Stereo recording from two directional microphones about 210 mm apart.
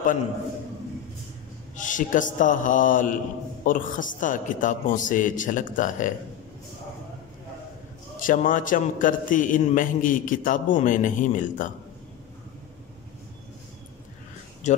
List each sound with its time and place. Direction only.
1.8 s a man's voice: 40° left (ahead or behind)
8.2 s a man's voice: 40° left (ahead or behind)
14.7 s speech: 35° left (ahead or behind)